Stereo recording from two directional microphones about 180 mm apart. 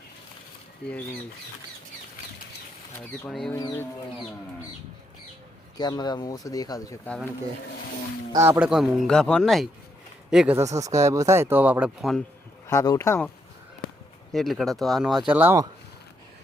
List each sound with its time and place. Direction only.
0.8 s speech: 70° left (ahead or behind)
3.0 s speech: centre (ahead or behind)
5.7 s speech: 20° left (ahead or behind)
8.3 s speech: 15° right (ahead or behind)
10.6 s speech: 20° right (ahead or behind); by 12.2 s centre (ahead or behind)
12.6 s speech: 20° left (ahead or behind)
14.3 s speech: centre (ahead or behind)
15.3 s speech: 10° right (ahead or behind)